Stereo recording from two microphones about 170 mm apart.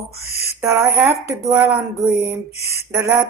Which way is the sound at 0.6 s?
15° right (ahead or behind).